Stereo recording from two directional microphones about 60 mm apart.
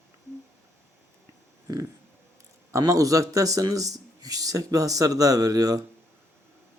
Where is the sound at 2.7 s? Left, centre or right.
Right.